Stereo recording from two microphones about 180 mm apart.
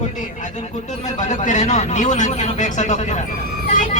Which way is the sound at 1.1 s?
40° left (ahead or behind).